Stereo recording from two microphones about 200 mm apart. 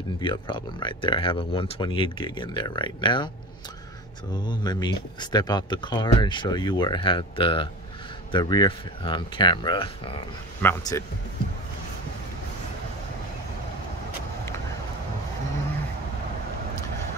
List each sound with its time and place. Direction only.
0.2 s speech: 25° left (ahead or behind)
4.3 s speech: 20° left (ahead or behind)
10.6 s speech: 15° left (ahead or behind)